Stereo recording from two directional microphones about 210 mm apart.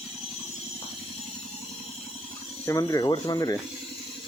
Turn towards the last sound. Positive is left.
turn(degrees=20)  # may be behind; listen again after turning